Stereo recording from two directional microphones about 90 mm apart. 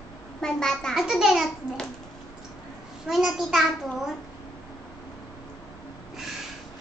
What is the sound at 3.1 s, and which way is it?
Speech, centre (ahead or behind).